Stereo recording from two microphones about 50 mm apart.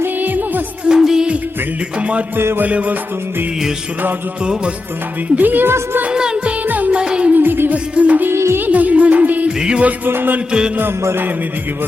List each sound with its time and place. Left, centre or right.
0.2 s music: right
0.9 s music of bollywood: centre
2.0 s music: right
5.4 s music: right
6.1 s music: centre
6.7 s music: right
6.9 s music: centre
7.3 s music: right
7.9 s music: right
8.3 s music: right
8.6 s music: right
9.6 s music: centre
10.1 s music: right